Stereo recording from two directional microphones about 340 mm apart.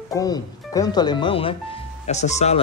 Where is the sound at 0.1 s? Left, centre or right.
Centre.